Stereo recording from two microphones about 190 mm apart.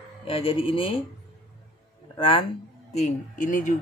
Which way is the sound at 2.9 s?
40° left (ahead or behind).